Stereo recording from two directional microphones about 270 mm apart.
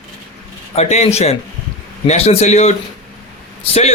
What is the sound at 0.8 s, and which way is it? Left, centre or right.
A man's voice, left.